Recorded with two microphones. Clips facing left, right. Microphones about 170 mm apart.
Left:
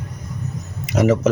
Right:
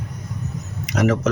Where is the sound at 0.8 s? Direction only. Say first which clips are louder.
Left 3 dB; 5° left (ahead or behind).